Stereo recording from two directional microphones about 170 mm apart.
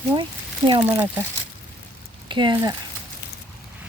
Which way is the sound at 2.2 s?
30° right (ahead or behind).